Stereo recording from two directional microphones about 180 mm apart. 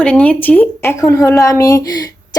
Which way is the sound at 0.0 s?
5° left (ahead or behind).